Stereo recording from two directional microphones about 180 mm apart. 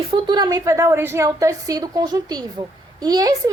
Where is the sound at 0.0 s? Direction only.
30° right (ahead or behind).